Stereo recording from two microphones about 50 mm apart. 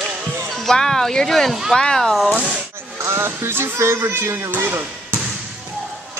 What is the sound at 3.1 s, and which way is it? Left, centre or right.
Speech, right.